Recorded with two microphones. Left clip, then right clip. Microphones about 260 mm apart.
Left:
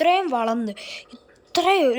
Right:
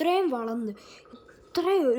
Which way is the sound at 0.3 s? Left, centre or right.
Centre.